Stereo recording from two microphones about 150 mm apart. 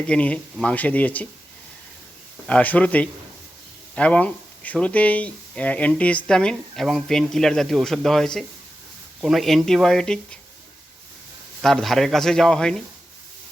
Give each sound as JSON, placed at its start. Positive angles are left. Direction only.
{"t": 0.0, "sound": "speech", "side_deg": 10}
{"t": 2.5, "sound": "speech", "side_deg": 10}
{"t": 11.6, "sound": "speech", "side_deg": 0}